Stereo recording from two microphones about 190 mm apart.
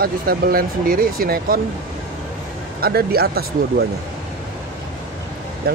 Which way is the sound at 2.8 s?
55° right (ahead or behind).